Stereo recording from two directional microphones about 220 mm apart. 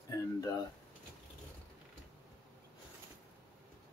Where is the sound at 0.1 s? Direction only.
15° left (ahead or behind).